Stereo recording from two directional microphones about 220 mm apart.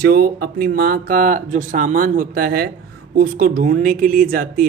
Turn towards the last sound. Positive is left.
turn(degrees=-40)  # may be behind; listen again after turning